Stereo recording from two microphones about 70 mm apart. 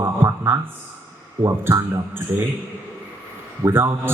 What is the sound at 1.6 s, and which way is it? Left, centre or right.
Speech, right.